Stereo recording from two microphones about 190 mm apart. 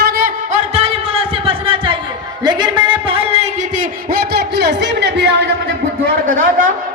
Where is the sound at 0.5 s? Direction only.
35° right (ahead or behind).